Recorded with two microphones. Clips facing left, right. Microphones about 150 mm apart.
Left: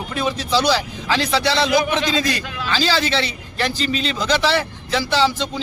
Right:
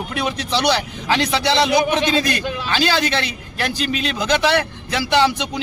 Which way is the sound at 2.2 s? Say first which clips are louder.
Right 1 dB; 60° right (ahead or behind).